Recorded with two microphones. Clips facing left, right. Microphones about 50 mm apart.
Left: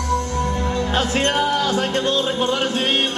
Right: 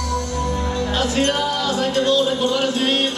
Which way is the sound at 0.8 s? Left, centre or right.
Left.